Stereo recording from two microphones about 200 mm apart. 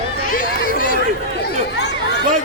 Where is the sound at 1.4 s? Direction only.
60° left (ahead or behind).